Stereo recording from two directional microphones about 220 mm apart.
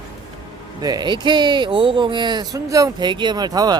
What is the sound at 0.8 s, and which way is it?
Speech, 20° right (ahead or behind).